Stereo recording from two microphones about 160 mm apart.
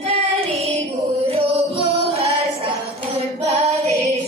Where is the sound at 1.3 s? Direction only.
40° right (ahead or behind).